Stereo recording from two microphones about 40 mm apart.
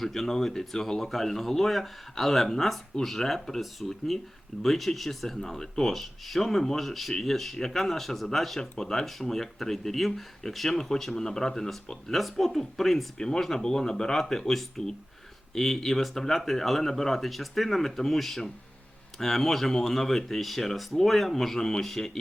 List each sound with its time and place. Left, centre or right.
0.0 s speech: centre
13.1 s speech: centre